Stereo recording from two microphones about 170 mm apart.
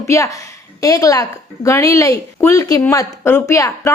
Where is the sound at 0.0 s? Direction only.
20° left (ahead or behind).